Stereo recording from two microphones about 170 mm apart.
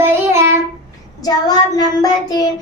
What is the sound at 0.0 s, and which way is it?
Child singing, 15° right (ahead or behind).